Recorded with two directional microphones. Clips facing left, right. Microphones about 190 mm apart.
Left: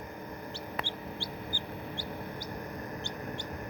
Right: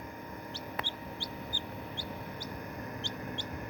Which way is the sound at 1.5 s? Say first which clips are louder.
Left 2 dB; 50° right (ahead or behind).